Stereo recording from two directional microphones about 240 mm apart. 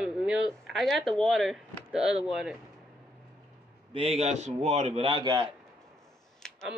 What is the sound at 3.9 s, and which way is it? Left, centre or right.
A man's voice, right.